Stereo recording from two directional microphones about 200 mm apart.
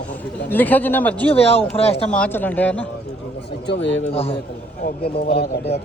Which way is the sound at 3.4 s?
60° left (ahead or behind).